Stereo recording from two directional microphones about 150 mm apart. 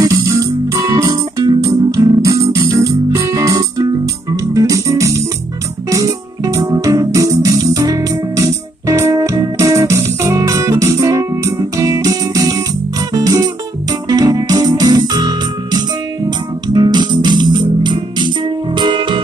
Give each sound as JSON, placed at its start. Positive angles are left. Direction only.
{"t": 0.0, "sound": "music", "side_deg": -25}
{"t": 13.1, "sound": "guitar", "side_deg": -25}
{"t": 14.0, "sound": "music", "side_deg": -25}